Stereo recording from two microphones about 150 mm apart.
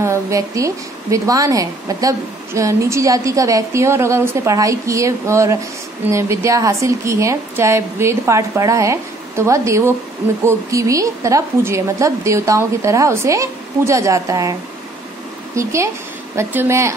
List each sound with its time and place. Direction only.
0.0 s a woman's voice: 20° right (ahead or behind)